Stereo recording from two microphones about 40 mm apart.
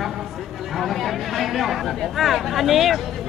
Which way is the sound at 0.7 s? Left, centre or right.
Centre.